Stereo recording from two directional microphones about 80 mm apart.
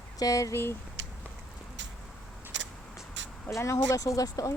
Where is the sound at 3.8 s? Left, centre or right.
Left.